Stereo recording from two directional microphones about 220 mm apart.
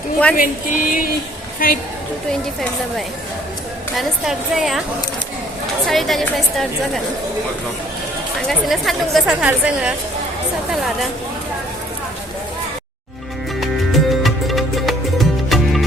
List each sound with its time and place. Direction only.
0.3 s a sound: 40° left (ahead or behind)
1.5 s a woman's voice: 40° left (ahead or behind)
3.9 s speech: centre (ahead or behind)
5.9 s speech: centre (ahead or behind)
8.4 s speech: centre (ahead or behind)
13.6 s music: centre (ahead or behind)